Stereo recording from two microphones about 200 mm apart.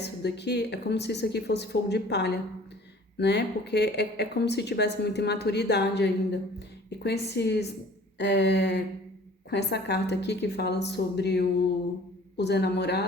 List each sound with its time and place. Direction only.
0.0 s a woman's voice: 55° left (ahead or behind)